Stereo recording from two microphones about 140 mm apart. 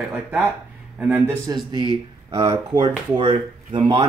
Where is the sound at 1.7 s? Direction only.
35° right (ahead or behind).